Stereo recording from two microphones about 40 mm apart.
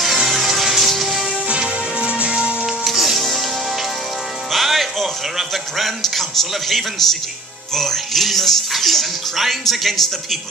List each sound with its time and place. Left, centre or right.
0.3 s music: centre
1.6 s music: right
2.6 s music: centre
4.5 s speech: centre